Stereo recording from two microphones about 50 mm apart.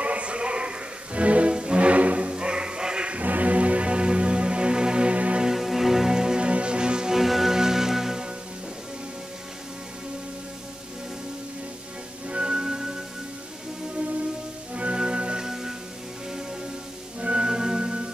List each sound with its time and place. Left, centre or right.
0.0 s music: right
3.2 s music: right
5.4 s music: centre
12.3 s music: centre
14.7 s music: right
17.2 s music: right